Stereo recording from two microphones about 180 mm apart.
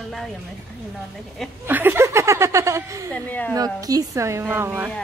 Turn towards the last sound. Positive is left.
turn(degrees=-10)  # may be behind; listen again after turning